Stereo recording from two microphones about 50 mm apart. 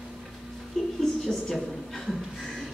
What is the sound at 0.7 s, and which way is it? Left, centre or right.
Music, centre.